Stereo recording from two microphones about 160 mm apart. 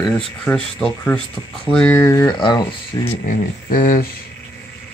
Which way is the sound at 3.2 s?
55° left (ahead or behind).